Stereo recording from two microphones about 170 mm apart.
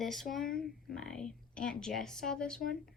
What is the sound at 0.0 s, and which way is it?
Speech, centre (ahead or behind).